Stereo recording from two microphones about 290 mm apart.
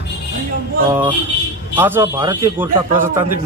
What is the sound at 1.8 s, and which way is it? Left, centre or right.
A man's voice, centre.